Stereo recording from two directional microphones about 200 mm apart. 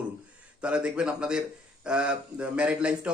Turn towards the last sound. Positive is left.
turn(degrees=-5)  # may be behind; listen again after turning